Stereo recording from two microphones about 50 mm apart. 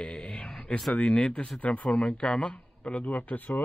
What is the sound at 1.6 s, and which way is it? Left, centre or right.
Speech, left.